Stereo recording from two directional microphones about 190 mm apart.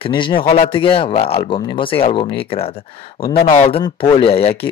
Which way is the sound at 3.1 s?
50° left (ahead or behind).